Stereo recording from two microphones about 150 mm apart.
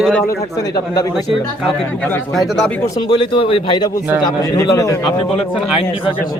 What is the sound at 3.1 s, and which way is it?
Speech, 35° left (ahead or behind).